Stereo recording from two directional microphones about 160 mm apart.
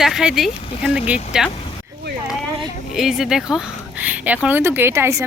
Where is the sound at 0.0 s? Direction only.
5° right (ahead or behind).